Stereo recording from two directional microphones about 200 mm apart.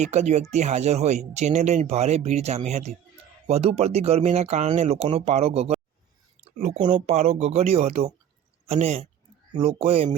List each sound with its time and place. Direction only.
0.0 s speech: 35° right (ahead or behind)
6.9 s speech: 35° right (ahead or behind)